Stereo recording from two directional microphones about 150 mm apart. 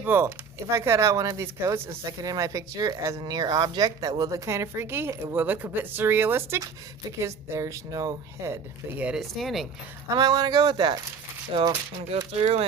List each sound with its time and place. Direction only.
0.0 s speech: 15° right (ahead or behind)
9.0 s speech: 5° right (ahead or behind)
10.2 s speech: 25° right (ahead or behind); by 12.6 s 45° right (ahead or behind)